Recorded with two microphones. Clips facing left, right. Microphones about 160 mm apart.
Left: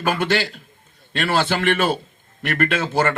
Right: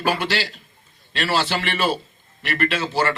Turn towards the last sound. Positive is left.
turn(degrees=50)  # may be behind; listen again after turning